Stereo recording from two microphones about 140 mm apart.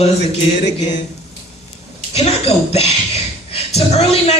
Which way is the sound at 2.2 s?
45° left (ahead or behind).